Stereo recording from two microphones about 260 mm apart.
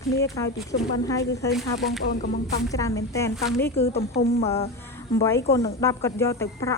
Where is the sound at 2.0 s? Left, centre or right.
Left.